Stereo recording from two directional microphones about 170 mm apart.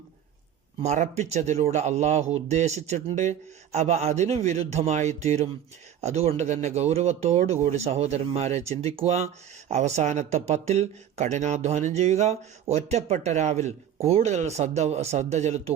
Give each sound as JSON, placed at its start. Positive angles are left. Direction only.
{"t": 0.8, "sound": "speech", "side_deg": -40}